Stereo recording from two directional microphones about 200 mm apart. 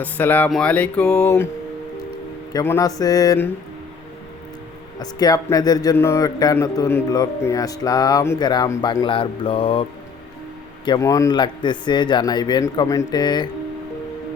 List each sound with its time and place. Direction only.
0.0 s speech: 10° left (ahead or behind)
2.5 s speech: 15° left (ahead or behind)
4.9 s speech: 20° left (ahead or behind)
10.8 s speech: 20° left (ahead or behind)